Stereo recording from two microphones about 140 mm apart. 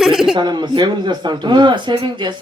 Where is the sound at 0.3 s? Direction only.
30° right (ahead or behind).